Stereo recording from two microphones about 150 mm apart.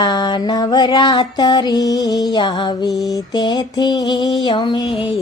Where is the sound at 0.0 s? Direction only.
30° left (ahead or behind).